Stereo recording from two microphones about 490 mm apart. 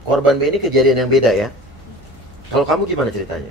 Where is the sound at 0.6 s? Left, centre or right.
Right.